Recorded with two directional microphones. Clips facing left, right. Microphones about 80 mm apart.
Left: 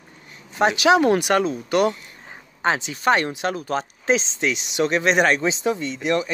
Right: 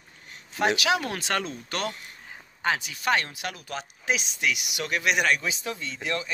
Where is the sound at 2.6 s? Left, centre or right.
Left.